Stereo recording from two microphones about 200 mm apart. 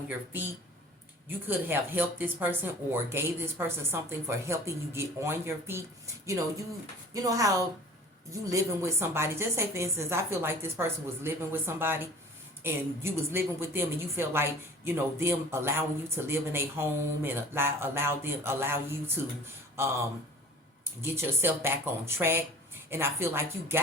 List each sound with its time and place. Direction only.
1.5 s speech: 10° right (ahead or behind)
21.0 s speech: 10° right (ahead or behind)